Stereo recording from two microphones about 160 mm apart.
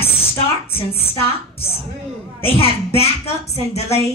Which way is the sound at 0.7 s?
35° left (ahead or behind).